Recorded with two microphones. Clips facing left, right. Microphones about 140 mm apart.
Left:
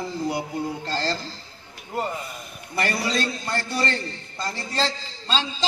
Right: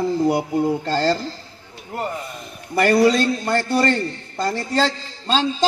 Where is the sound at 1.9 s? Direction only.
Centre (ahead or behind).